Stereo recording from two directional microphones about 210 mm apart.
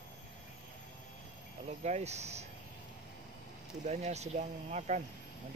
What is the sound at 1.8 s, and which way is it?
Speech, 30° right (ahead or behind).